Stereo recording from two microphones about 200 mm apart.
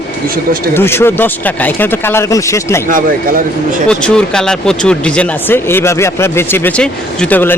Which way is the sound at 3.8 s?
5° left (ahead or behind).